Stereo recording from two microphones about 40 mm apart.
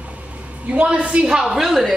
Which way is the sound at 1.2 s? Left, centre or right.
Centre.